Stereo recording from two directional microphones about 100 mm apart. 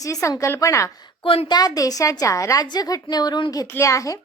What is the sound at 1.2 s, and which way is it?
Speech, 65° left (ahead or behind).